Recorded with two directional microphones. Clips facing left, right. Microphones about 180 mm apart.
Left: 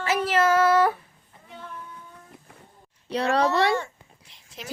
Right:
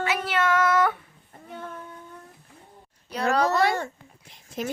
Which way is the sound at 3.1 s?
30° left (ahead or behind).